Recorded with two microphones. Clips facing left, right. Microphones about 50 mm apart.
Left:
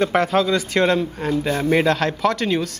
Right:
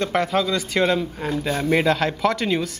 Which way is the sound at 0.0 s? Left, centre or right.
Centre.